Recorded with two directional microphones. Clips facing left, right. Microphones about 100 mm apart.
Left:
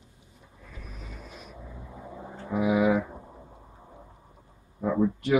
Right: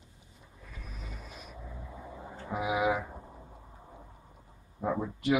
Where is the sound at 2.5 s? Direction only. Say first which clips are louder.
Left 6 dB; 10° right (ahead or behind).